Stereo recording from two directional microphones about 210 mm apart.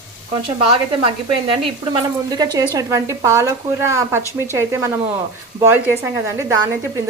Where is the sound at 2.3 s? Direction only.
20° right (ahead or behind).